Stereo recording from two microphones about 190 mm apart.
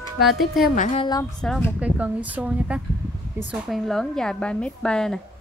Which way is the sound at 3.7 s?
Centre (ahead or behind).